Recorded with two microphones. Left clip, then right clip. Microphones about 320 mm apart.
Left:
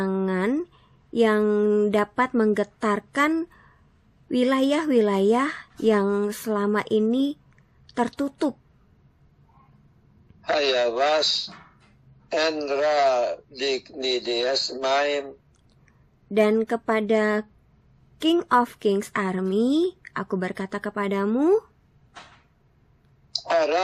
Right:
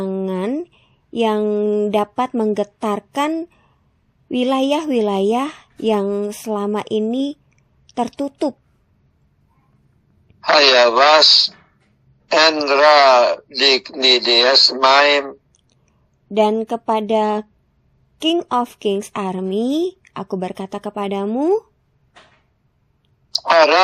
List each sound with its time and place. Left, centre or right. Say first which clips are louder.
0.0 s a sound: right 3 dB; centre
2.8 s speech: right 1 dB; centre
10.4 s a man's voice: right 11 dB; right
16.3 s speech: right 4 dB; centre
23.5 s a man's voice: right 10 dB; right